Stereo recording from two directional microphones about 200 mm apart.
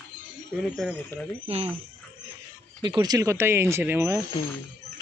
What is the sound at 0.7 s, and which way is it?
Speech, centre (ahead or behind).